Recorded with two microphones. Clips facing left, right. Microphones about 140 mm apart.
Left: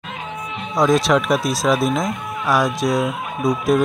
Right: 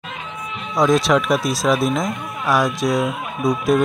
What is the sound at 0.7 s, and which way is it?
Speech, centre (ahead or behind).